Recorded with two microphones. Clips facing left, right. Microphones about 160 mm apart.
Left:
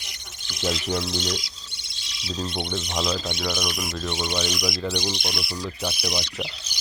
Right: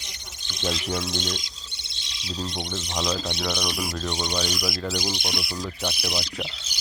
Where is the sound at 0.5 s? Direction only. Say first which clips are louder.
Left 2 dB; 15° left (ahead or behind).